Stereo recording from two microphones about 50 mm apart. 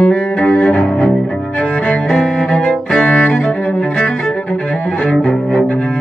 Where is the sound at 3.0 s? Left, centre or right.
Left.